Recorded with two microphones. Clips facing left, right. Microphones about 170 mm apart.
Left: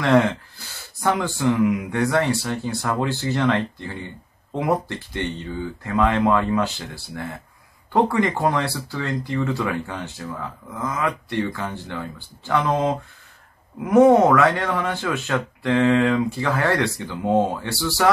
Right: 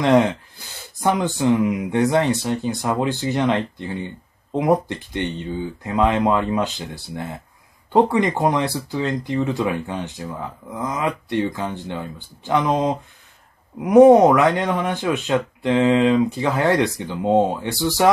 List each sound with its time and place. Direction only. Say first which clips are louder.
0.0 s speech: right 2 dB; 15° right (ahead or behind)